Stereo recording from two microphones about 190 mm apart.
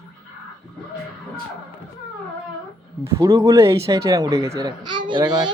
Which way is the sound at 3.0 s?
15° right (ahead or behind).